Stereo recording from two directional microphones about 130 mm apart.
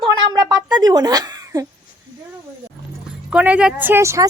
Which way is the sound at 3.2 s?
10° right (ahead or behind).